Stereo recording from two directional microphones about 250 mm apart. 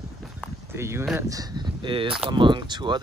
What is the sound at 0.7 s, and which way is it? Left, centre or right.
Speech, centre.